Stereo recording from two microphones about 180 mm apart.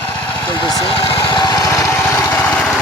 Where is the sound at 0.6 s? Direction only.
30° left (ahead or behind).